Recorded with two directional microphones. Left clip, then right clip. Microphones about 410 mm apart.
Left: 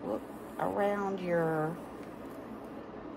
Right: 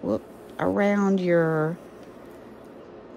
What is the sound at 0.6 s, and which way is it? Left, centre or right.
Speech, right.